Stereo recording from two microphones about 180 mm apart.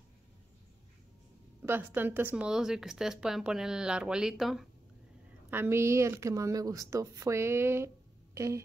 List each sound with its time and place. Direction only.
1.6 s speech: 10° right (ahead or behind)
5.5 s speech: 15° right (ahead or behind)